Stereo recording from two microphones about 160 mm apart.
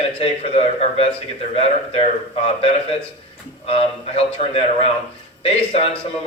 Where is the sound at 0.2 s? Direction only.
40° left (ahead or behind).